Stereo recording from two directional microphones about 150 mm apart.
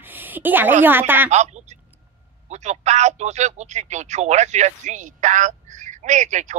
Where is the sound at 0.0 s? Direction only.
10° right (ahead or behind).